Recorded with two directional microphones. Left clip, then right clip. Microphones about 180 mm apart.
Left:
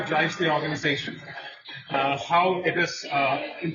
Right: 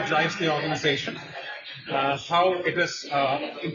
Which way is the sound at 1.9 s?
20° right (ahead or behind).